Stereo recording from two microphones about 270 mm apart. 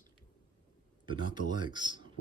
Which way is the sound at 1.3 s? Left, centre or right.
Centre.